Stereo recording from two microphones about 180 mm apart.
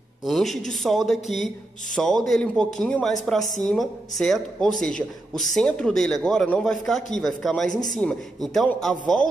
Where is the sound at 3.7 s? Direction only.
Centre (ahead or behind).